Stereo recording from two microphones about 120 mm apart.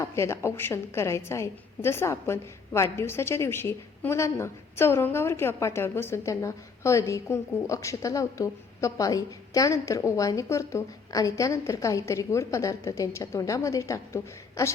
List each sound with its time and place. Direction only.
0.0 s a woman's voice: 25° left (ahead or behind)